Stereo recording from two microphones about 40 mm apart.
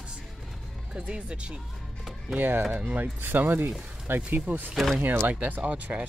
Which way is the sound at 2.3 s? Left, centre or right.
Right.